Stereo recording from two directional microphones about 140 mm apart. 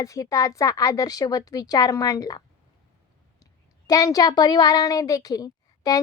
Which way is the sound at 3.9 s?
25° left (ahead or behind).